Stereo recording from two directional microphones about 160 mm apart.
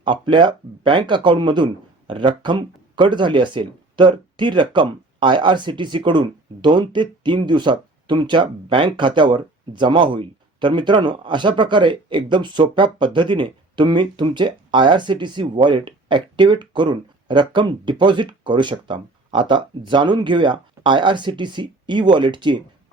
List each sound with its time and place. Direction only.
0.0 s speech: 30° right (ahead or behind)